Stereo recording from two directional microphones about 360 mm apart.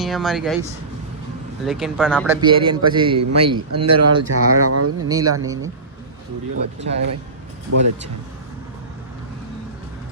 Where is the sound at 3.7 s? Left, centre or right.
Right.